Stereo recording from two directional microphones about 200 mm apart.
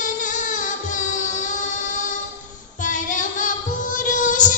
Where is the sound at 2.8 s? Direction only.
40° left (ahead or behind).